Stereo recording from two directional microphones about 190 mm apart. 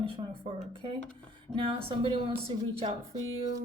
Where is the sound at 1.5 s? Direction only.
25° right (ahead or behind).